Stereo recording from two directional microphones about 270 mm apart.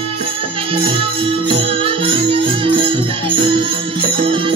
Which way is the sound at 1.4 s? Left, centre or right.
Centre.